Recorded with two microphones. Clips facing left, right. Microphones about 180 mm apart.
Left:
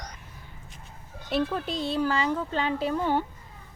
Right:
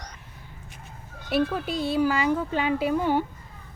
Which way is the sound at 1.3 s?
5° right (ahead or behind).